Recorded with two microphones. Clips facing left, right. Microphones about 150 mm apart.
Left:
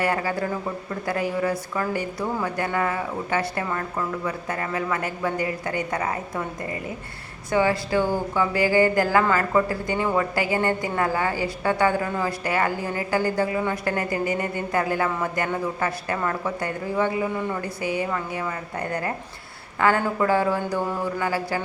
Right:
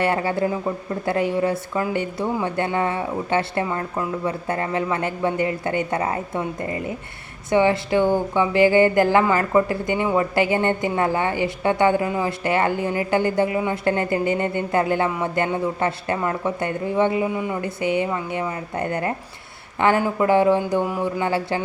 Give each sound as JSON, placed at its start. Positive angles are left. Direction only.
{"t": 0.0, "sound": "a woman's voice", "side_deg": -25}
{"t": 17.6, "sound": "a woman's voice", "side_deg": -25}